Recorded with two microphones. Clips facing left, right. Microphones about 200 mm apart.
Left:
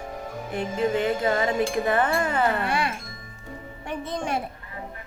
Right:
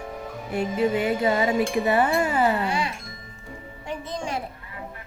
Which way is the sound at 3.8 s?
60° left (ahead or behind).